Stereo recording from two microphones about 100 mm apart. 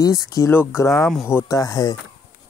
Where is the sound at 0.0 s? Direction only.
35° left (ahead or behind).